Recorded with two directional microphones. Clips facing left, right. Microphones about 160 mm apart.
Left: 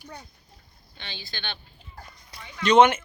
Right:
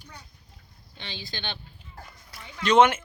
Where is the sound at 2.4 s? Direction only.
5° right (ahead or behind).